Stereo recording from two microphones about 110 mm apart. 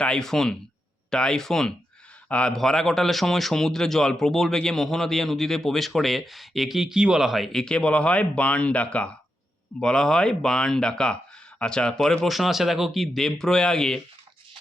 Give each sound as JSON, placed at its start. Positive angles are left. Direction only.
{"t": 0.0, "sound": "a man's voice", "side_deg": 5}